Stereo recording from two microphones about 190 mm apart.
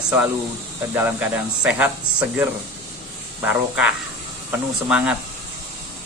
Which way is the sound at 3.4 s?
5° right (ahead or behind).